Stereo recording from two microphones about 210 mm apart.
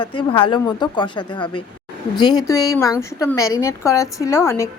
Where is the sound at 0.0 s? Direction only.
25° left (ahead or behind).